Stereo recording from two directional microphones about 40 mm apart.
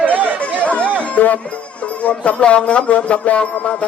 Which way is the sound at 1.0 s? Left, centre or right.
Left.